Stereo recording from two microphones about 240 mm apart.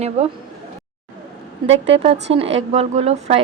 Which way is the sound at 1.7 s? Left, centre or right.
Right.